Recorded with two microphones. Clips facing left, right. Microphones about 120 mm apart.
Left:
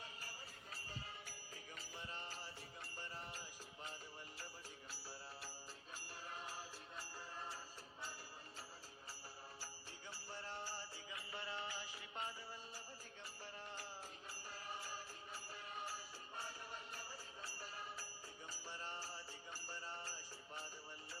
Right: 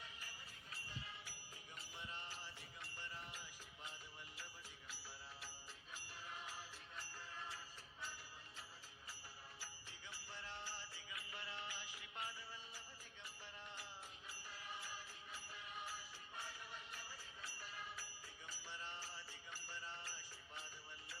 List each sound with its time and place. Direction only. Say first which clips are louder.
0.0 s music: left 3 dB; 40° left (ahead or behind)
4.9 s music: left 2 dB; 35° left (ahead or behind)
10.1 s music: left 3 dB; 35° left (ahead or behind)
14.3 s music: left 2 dB; 35° left (ahead or behind)